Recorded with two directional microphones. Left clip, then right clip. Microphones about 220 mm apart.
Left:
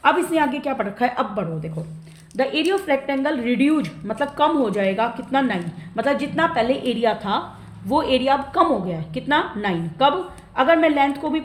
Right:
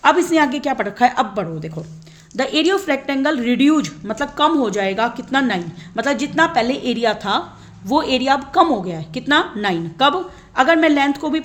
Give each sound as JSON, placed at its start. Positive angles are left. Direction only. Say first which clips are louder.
{"t": 0.0, "sound": "a woman's voice", "louder": "right 4 dB", "side_deg": -50}